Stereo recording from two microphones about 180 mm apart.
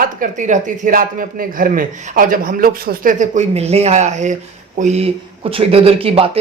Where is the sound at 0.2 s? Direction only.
45° right (ahead or behind).